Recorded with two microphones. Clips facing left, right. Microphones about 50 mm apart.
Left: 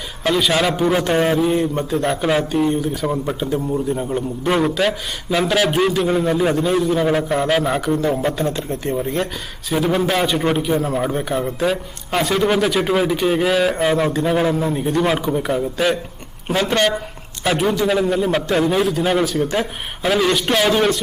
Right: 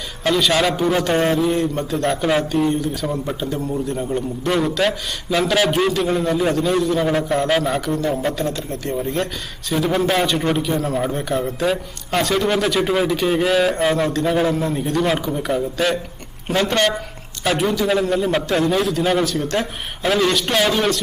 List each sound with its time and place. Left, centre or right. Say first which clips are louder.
0.3 s a man's voice: even; centre
4.8 s a man's voice: even; centre
8.4 s speech: left 2 dB; left
8.9 s a man's voice: even; centre